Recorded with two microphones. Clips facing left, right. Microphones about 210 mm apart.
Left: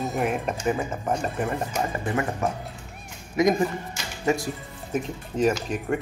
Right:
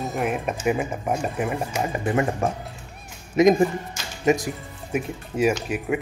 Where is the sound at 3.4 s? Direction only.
25° right (ahead or behind); by 6.0 s 5° right (ahead or behind).